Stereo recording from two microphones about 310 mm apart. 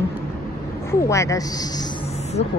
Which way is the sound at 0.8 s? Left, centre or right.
Centre.